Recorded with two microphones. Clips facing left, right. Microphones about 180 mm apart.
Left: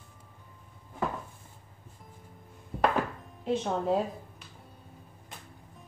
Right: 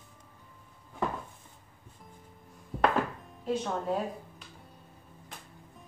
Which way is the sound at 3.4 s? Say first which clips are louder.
Left 2 dB; 25° left (ahead or behind).